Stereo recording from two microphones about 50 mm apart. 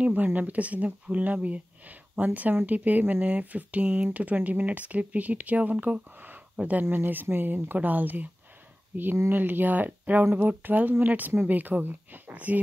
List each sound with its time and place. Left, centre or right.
0.0 s speech: right
6.8 s speech: right